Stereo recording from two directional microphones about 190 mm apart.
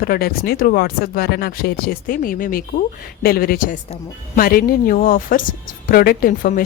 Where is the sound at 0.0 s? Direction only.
55° left (ahead or behind).